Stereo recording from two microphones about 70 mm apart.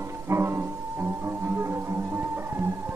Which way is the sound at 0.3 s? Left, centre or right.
Right.